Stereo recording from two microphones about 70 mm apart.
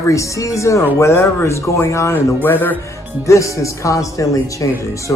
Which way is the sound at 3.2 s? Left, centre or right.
Left.